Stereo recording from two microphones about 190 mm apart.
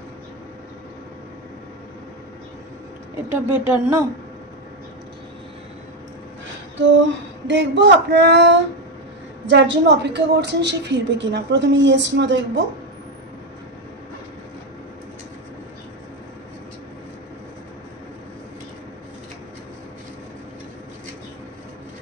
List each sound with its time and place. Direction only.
3.3 s a woman's voice: 15° right (ahead or behind)
7.4 s a woman's voice: 70° right (ahead or behind)